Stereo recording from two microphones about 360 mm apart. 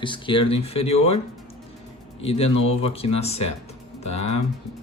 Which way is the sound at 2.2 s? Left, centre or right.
Centre.